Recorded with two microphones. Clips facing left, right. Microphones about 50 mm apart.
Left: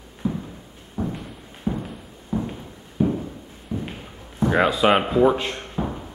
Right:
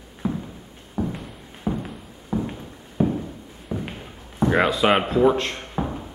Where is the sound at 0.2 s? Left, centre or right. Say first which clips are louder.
Even; right.